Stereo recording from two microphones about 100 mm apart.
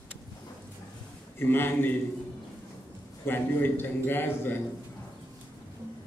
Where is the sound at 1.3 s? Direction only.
20° left (ahead or behind).